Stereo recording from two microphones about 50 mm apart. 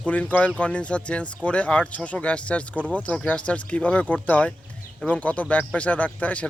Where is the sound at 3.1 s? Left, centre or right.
Left.